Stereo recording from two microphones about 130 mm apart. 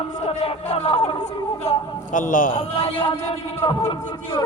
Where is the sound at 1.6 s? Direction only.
70° left (ahead or behind); by 2.5 s 90° left.